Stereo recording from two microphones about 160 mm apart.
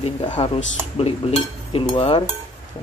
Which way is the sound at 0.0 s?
30° left (ahead or behind).